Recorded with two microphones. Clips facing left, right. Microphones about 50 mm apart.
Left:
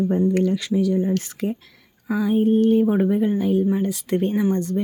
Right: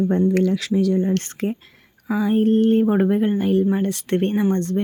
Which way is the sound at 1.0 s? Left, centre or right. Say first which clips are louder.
Right 1 dB; right.